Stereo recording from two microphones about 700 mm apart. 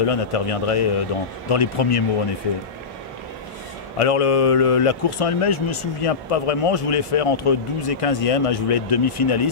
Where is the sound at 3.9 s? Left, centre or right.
Left.